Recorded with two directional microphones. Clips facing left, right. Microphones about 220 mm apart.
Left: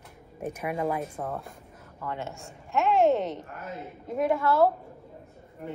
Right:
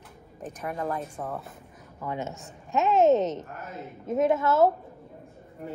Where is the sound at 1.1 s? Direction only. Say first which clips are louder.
Left 1 dB; centre (ahead or behind).